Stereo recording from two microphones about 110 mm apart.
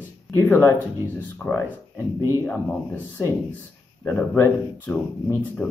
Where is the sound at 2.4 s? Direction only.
20° left (ahead or behind).